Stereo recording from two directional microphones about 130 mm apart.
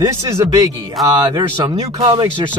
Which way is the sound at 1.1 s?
30° right (ahead or behind).